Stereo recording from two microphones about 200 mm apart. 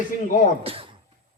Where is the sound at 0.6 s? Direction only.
30° right (ahead or behind).